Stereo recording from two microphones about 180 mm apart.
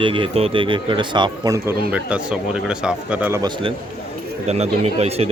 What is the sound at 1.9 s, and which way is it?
Speech, 5° right (ahead or behind).